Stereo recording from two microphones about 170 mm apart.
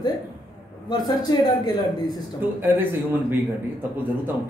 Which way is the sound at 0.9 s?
25° left (ahead or behind).